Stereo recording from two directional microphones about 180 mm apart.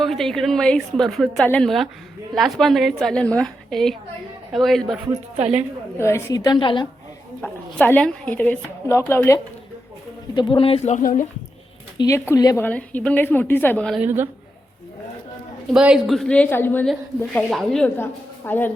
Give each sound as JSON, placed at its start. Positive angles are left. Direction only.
{"t": 0.0, "sound": "a woman's voice", "side_deg": 0}
{"t": 5.4, "sound": "a woman's voice", "side_deg": -35}
{"t": 6.0, "sound": "a woman's voice", "side_deg": 15}
{"t": 7.4, "sound": "a woman's voice", "side_deg": 5}
{"t": 10.3, "sound": "speech", "side_deg": 25}
{"t": 11.9, "sound": "a woman's voice", "side_deg": 20}
{"t": 12.6, "sound": "a woman's voice", "side_deg": 10}
{"t": 14.0, "sound": "a woman's voice", "side_deg": -10}
{"t": 15.7, "sound": "a woman's voice", "side_deg": -5}